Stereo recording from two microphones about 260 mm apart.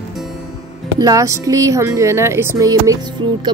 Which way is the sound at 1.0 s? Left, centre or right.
Centre.